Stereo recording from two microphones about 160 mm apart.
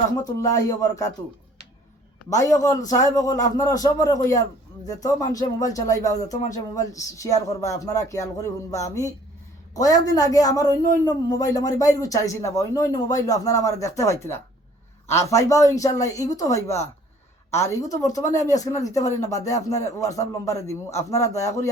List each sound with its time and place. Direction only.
0.3 s speech: 20° left (ahead or behind)
2.4 s speech: 20° left (ahead or behind)